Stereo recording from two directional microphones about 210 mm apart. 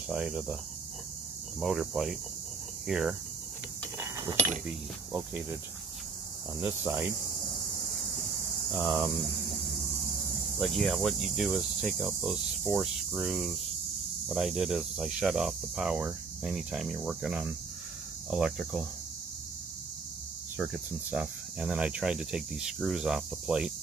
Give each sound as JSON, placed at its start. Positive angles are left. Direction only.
{"t": 0.1, "sound": "cricket", "side_deg": -5}
{"t": 1.6, "sound": "cricket", "side_deg": 0}
{"t": 4.0, "sound": "a sound", "side_deg": -15}
{"t": 4.6, "sound": "cricket", "side_deg": -5}
{"t": 6.6, "sound": "cricket", "side_deg": -10}
{"t": 8.7, "sound": "cricket", "side_deg": -10}
{"t": 10.6, "sound": "cricket", "side_deg": 0}
{"t": 20.5, "sound": "cricket", "side_deg": -5}